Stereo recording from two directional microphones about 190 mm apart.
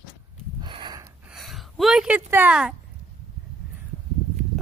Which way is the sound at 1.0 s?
Centre (ahead or behind).